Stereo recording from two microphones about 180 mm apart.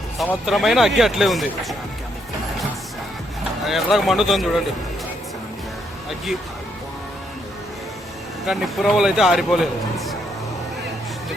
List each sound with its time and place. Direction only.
0.2 s a man's voice: centre (ahead or behind)
3.6 s a man's voice: centre (ahead or behind)
8.4 s a man's voice: centre (ahead or behind)